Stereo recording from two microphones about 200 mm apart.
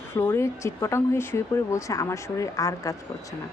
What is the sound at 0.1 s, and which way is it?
A woman's voice, 15° left (ahead or behind).